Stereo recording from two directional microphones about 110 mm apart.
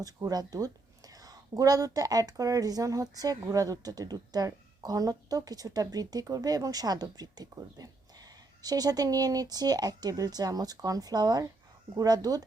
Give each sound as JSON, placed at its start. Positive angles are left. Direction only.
{"t": 0.0, "sound": "speech", "side_deg": -35}